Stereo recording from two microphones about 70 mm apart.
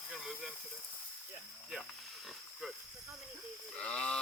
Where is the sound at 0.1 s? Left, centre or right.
Centre.